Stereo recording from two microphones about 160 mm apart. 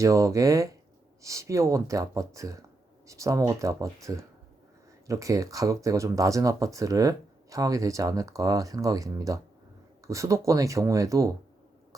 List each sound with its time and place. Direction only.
0.0 s speech: 20° right (ahead or behind)